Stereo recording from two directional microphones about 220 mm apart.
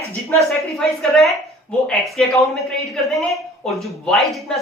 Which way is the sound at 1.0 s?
Centre (ahead or behind).